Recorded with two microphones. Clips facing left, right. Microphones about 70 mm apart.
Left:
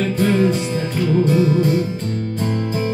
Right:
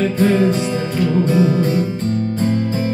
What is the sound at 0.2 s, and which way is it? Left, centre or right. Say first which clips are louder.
Music: right 1 dB; right.